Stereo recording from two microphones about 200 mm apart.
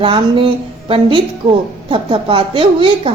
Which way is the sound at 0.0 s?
25° right (ahead or behind).